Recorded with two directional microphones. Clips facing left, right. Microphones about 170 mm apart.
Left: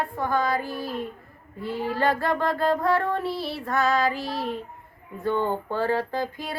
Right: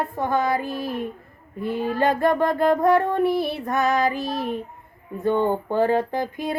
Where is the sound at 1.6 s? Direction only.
20° right (ahead or behind).